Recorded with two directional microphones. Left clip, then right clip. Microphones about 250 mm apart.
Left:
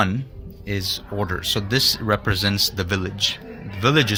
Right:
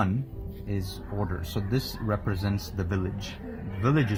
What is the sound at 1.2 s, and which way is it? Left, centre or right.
A man's voice, left.